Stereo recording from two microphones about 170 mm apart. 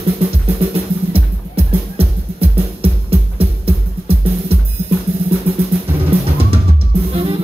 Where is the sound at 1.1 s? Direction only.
35° right (ahead or behind).